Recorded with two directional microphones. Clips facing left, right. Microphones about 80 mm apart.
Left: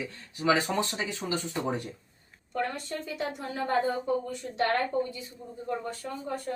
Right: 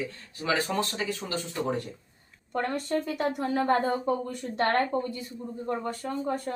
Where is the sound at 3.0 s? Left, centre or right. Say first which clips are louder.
Right 6 dB; right.